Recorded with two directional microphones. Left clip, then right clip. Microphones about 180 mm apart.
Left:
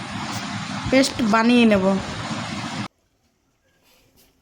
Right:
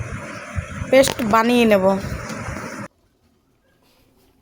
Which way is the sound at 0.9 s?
15° right (ahead or behind).